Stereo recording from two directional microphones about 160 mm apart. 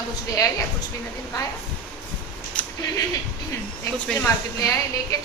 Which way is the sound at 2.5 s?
5° left (ahead or behind).